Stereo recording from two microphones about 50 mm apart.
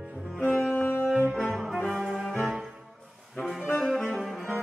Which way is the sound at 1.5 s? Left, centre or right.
Centre.